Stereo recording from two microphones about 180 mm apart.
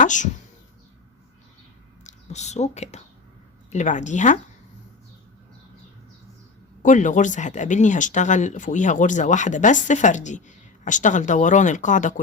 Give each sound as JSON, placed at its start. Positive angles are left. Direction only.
{"t": 0.0, "sound": "speech", "side_deg": 45}
{"t": 2.0, "sound": "speech", "side_deg": 40}
{"t": 6.8, "sound": "speech", "side_deg": 45}